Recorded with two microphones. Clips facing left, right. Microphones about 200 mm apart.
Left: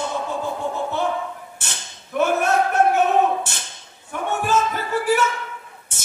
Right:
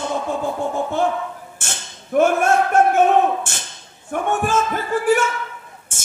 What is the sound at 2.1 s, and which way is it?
Speech, 50° right (ahead or behind).